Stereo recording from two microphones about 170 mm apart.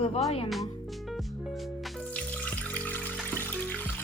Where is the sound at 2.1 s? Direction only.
10° left (ahead or behind).